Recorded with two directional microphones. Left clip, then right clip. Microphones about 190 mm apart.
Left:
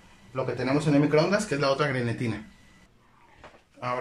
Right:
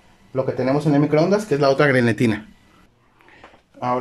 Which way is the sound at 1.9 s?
55° right (ahead or behind).